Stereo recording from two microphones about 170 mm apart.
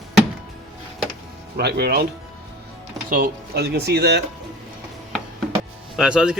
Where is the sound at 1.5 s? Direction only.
70° right (ahead or behind).